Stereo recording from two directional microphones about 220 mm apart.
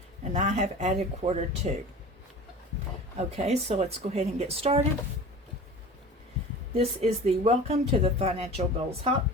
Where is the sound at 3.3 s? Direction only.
30° right (ahead or behind).